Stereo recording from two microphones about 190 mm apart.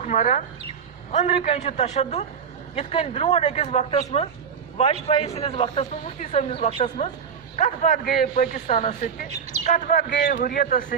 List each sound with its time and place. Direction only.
0.0 s a man's voice: 40° left (ahead or behind)
7.5 s speech: 40° left (ahead or behind)
10.1 s speech: 65° left (ahead or behind); by 10.9 s 45° left (ahead or behind)